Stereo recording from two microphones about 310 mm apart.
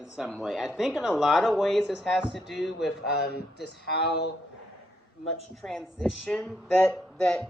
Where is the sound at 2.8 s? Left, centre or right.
Left.